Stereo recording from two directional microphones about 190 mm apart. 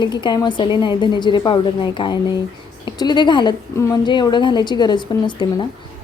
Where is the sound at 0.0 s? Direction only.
25° left (ahead or behind).